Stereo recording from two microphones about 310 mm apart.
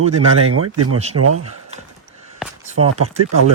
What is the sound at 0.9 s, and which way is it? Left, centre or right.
Speech, centre.